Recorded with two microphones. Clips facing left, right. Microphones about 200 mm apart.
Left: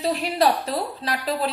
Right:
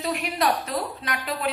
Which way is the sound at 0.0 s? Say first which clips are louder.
Left 4 dB; 30° left (ahead or behind).